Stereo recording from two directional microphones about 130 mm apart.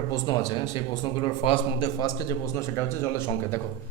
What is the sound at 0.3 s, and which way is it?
A man's voice, 35° left (ahead or behind).